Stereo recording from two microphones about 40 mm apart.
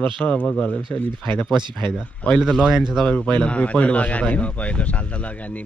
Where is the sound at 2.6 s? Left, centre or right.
Centre.